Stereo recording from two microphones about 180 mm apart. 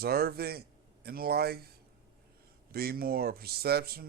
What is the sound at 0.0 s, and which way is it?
Speech, 60° right (ahead or behind).